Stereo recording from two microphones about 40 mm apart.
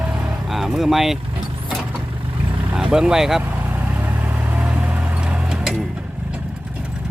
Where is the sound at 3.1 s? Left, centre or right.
Centre.